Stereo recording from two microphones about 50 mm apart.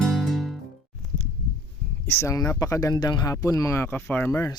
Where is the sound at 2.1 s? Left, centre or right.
Left.